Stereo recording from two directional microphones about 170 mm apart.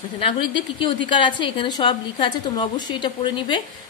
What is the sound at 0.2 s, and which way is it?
A woman's voice, 30° left (ahead or behind).